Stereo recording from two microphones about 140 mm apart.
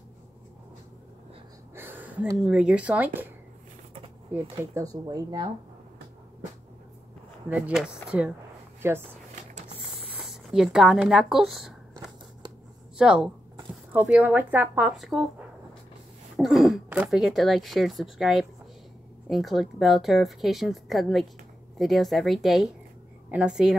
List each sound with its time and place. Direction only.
1.8 s a sound: 15° right (ahead or behind)
2.3 s speech: 5° right (ahead or behind)
4.3 s speech: 20° right (ahead or behind)
7.4 s speech: 10° right (ahead or behind)
10.1 s speech: 5° right (ahead or behind)
12.9 s speech: 5° right (ahead or behind)
16.3 s speech: centre (ahead or behind)